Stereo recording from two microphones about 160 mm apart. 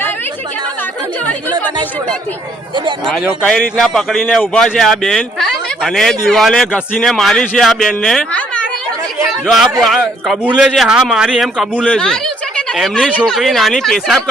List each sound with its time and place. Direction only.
3.1 s a man's voice: 5° left (ahead or behind)
9.2 s a sound: centre (ahead or behind)
9.8 s a man's voice: centre (ahead or behind)